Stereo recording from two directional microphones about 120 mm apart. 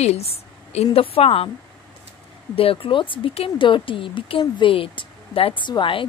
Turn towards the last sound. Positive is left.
turn(degrees=45)  # may be behind; listen again after turning